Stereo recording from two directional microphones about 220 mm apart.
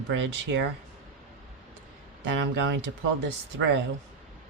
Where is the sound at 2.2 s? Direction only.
55° right (ahead or behind).